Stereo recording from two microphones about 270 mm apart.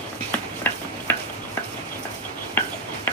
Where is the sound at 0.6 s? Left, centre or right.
Centre.